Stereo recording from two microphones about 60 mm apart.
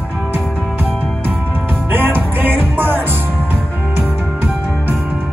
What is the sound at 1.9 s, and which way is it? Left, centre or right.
Music, right.